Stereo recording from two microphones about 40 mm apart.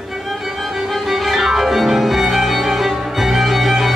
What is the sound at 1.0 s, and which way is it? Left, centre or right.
Violin, centre.